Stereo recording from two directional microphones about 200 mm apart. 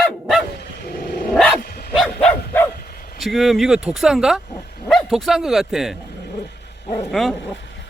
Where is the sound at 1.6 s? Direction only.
50° left (ahead or behind).